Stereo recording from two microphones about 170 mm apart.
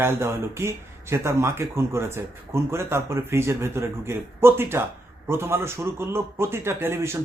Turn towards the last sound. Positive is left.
turn(degrees=-15)  # may be behind; listen again after turning